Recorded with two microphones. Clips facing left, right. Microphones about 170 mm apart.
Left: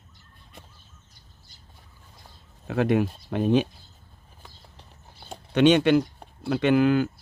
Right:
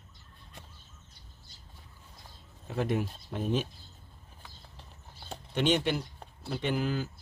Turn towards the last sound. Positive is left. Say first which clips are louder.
# left 11 dB
turn(degrees=70)  # may be behind; listen again after turning